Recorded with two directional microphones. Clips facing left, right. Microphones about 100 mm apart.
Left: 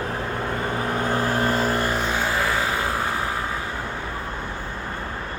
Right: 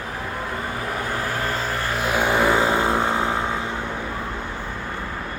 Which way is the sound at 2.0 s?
15° right (ahead or behind).